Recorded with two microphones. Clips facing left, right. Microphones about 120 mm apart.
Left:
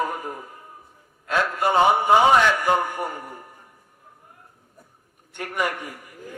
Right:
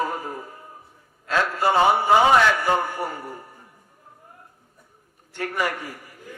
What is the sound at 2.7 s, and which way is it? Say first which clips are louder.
Speech: left 1 dB; 15° left (ahead or behind).